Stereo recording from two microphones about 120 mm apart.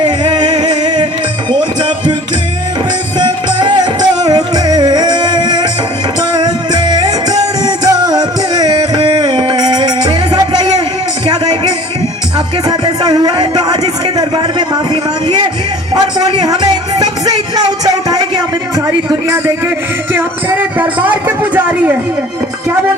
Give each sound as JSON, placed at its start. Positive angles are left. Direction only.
{"t": 0.3, "sound": "music", "side_deg": -40}
{"t": 3.2, "sound": "music", "side_deg": -40}
{"t": 12.6, "sound": "a sound", "side_deg": -35}
{"t": 16.0, "sound": "music", "side_deg": -35}
{"t": 20.1, "sound": "music", "side_deg": -15}